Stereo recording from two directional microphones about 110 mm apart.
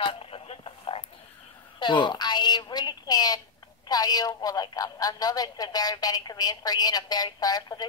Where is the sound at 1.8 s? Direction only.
45° left (ahead or behind).